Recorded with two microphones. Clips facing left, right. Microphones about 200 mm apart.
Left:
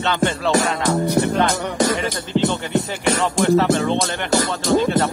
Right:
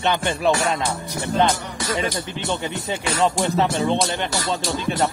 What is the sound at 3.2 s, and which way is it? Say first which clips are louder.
Music: left 2 dB; 20° right (ahead or behind).